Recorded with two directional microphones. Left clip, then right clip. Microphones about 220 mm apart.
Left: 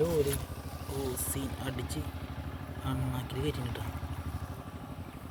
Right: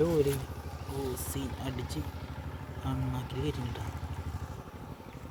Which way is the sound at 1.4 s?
45° right (ahead or behind).